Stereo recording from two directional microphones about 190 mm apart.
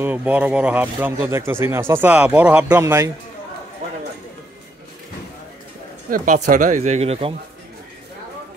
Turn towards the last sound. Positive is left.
turn(degrees=-30)  # may be behind; listen again after turning